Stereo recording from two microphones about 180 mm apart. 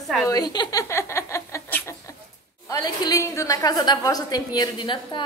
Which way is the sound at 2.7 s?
20° left (ahead or behind).